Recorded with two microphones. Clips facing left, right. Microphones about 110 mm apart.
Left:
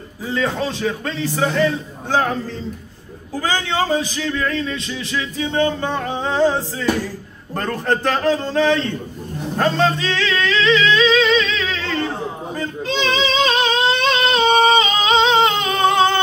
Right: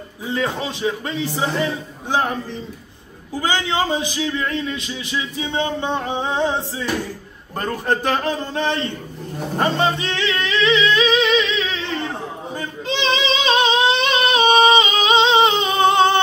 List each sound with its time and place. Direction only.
0.3 s a man's voice: 15° right (ahead or behind)
3.3 s a man's voice: 20° right (ahead or behind)
9.6 s music: 15° right (ahead or behind)
12.5 s singing: 20° right (ahead or behind)